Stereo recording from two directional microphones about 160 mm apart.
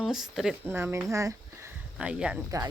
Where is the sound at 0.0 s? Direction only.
Centre (ahead or behind).